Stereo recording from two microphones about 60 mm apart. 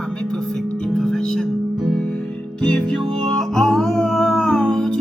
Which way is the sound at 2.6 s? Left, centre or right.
Centre.